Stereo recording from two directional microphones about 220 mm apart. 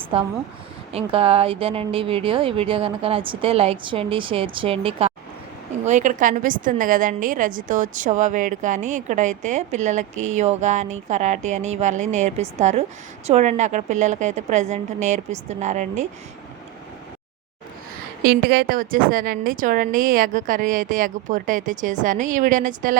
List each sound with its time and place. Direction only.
0.9 s a woman's voice: 25° right (ahead or behind)
18.2 s a woman's voice: 45° right (ahead or behind)